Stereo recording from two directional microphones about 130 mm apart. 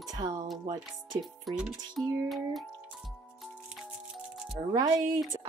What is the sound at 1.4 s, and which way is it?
Speech, 5° right (ahead or behind).